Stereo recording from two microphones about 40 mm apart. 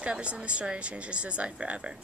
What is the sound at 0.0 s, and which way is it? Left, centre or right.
Speech, right.